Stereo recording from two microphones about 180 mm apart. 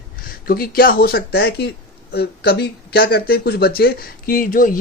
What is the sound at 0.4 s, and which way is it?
Speech, 55° left (ahead or behind).